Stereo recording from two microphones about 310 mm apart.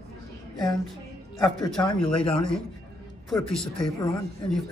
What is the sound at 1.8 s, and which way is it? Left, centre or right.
Speech, centre.